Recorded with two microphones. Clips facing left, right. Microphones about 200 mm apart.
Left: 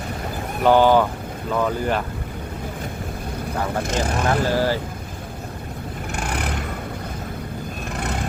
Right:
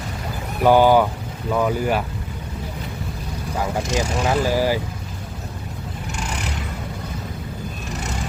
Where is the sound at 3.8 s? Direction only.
55° left (ahead or behind).